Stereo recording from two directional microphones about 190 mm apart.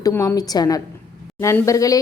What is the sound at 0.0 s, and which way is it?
Speech, 15° left (ahead or behind).